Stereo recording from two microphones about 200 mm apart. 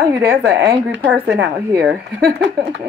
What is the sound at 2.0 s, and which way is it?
Speech, 55° right (ahead or behind).